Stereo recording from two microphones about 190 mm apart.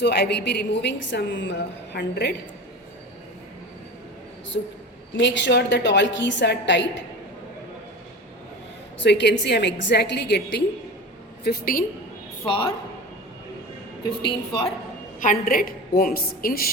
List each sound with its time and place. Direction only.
0.0 s a woman's voice: 60° left (ahead or behind)
5.1 s a woman's voice: 75° left (ahead or behind)
9.0 s a woman's voice: 65° left (ahead or behind)
11.4 s a woman's voice: 50° left (ahead or behind)
14.0 s a woman's voice: 25° left (ahead or behind)
15.2 s a woman's voice: 45° left (ahead or behind)